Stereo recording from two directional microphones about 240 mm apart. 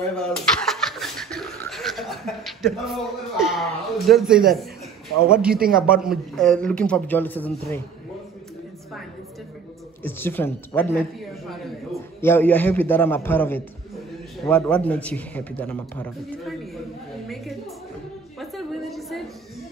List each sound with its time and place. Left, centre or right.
0.1 s snicker: centre
4.1 s a man's voice: centre
5.5 s a man's voice: right
5.9 s a man's voice: centre
10.0 s a man's voice: centre
18.4 s a sound: centre